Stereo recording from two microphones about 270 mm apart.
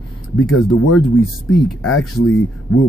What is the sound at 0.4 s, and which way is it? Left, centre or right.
Speech, left.